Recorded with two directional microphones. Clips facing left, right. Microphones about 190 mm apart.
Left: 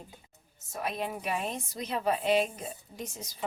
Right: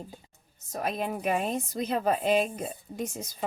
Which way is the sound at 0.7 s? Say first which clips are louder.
Right 3 dB; 45° right (ahead or behind).